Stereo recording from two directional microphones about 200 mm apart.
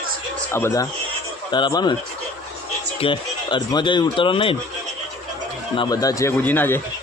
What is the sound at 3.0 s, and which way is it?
Speech, 25° left (ahead or behind).